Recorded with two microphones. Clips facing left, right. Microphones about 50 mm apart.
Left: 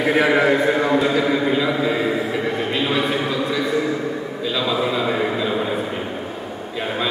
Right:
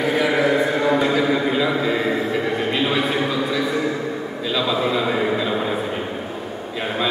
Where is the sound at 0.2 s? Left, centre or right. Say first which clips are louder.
Left 2 dB; left.